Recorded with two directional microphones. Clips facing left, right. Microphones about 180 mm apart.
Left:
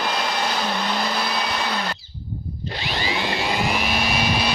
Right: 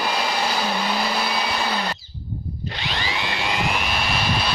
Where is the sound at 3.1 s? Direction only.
35° left (ahead or behind).